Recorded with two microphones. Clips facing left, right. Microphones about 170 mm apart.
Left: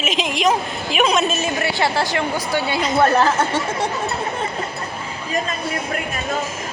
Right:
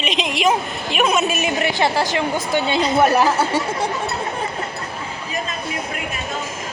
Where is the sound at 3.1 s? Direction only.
10° right (ahead or behind).